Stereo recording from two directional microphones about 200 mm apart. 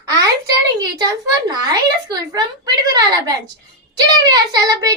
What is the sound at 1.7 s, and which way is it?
A child's voice, 20° right (ahead or behind).